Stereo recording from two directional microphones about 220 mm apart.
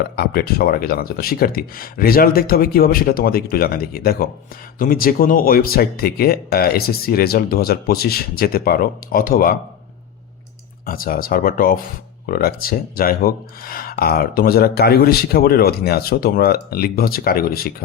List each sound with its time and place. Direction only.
0.2 s speech: 45° left (ahead or behind)
10.8 s speech: 40° left (ahead or behind)